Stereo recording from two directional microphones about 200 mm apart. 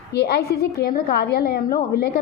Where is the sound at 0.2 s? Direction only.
50° left (ahead or behind).